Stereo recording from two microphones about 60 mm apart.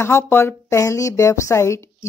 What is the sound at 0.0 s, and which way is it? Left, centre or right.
Speech, left.